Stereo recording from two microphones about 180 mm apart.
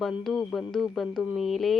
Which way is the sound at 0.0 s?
Centre (ahead or behind).